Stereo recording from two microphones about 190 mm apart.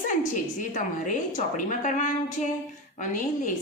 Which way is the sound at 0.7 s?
40° left (ahead or behind).